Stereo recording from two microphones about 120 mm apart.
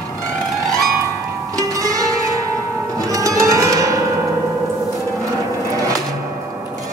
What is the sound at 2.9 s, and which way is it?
Music, 30° right (ahead or behind).